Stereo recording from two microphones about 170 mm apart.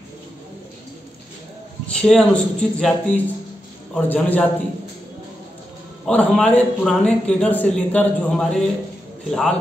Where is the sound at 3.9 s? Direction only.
10° left (ahead or behind).